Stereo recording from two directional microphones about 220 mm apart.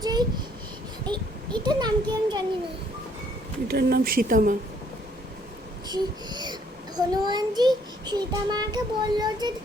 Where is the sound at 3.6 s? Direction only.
45° right (ahead or behind).